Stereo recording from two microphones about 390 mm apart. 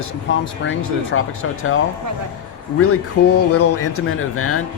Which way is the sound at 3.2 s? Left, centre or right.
Left.